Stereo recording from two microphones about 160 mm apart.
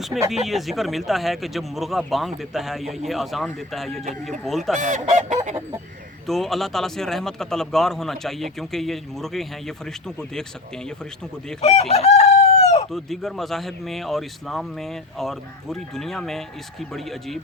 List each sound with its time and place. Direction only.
0.4 s speech: centre (ahead or behind)
4.8 s goose: 50° right (ahead or behind)
6.2 s speech: centre (ahead or behind)
11.6 s chicken: 40° left (ahead or behind)
12.9 s speech: centre (ahead or behind)